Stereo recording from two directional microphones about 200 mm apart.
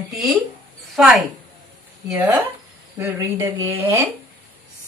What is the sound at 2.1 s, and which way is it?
A woman's voice, 20° right (ahead or behind).